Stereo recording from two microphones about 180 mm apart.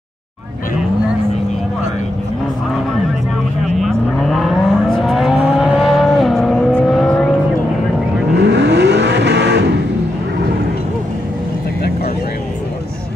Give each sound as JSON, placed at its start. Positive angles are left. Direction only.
{"t": 3.6, "sound": "vehicle", "side_deg": 0}
{"t": 8.4, "sound": "vehicle", "side_deg": -70}